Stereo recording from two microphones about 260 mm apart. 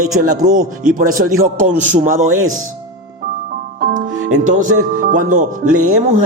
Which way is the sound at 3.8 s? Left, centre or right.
Right.